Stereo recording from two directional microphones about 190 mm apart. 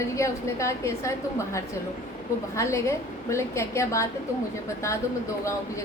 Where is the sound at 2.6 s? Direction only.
15° left (ahead or behind).